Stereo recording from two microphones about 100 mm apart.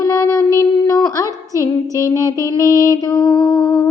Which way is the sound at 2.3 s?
35° right (ahead or behind).